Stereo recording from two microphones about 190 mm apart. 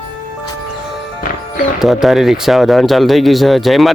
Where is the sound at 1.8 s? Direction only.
Centre (ahead or behind).